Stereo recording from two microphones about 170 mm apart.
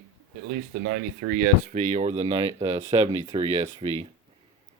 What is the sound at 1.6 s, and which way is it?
Speech, 45° right (ahead or behind).